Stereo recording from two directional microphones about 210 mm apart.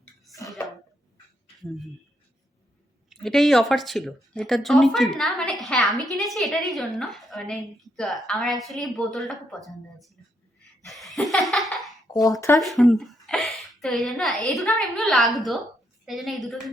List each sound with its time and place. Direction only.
3.1 s speech: centre (ahead or behind)
10.8 s laughter: centre (ahead or behind)
12.1 s speech: 15° left (ahead or behind)
12.5 s speech: centre (ahead or behind)